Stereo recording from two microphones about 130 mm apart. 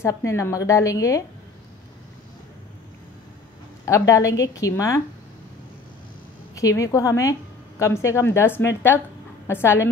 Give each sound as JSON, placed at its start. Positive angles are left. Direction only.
{"t": 0.0, "sound": "a woman's voice", "side_deg": 20}
{"t": 3.8, "sound": "a woman's voice", "side_deg": 25}
{"t": 6.5, "sound": "a woman's voice", "side_deg": 25}